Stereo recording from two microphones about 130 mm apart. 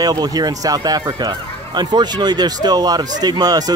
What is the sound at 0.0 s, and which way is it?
Speech, 30° right (ahead or behind).